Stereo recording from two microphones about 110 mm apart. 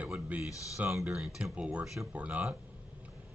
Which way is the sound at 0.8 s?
5° right (ahead or behind).